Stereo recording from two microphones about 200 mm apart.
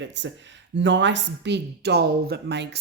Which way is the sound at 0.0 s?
65° right (ahead or behind).